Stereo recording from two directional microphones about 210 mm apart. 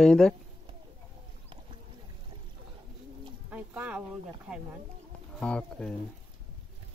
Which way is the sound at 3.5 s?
5° right (ahead or behind).